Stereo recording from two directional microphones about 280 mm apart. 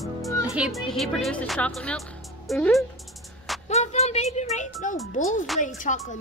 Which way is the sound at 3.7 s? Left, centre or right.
Left.